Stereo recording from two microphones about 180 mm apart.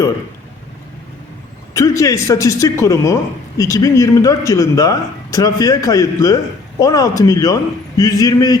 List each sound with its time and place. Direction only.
1.7 s a woman's voice: 15° left (ahead or behind)